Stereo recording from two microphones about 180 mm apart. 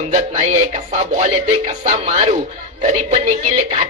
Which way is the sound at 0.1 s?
40° right (ahead or behind).